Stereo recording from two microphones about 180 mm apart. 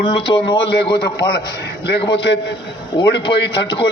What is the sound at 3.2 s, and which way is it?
Speech, 30° left (ahead or behind).